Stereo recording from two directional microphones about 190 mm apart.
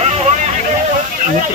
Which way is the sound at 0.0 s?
35° right (ahead or behind).